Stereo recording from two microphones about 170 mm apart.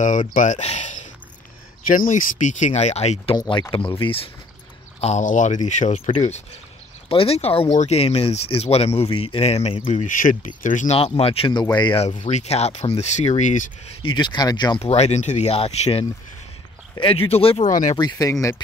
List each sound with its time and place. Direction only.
0.0 s speech: 50° left (ahead or behind)
3.3 s speech: 25° left (ahead or behind)
5.0 s speech: 45° left (ahead or behind)
11.0 s speech: 35° left (ahead or behind)
12.2 s speech: 45° left (ahead or behind)
14.0 s speech: 25° left (ahead or behind)
14.8 s speech: 40° left (ahead or behind)
17.9 s speech: 25° left (ahead or behind)